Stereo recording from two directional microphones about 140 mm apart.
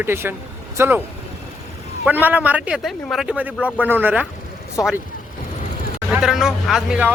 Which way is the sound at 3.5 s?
10° left (ahead or behind).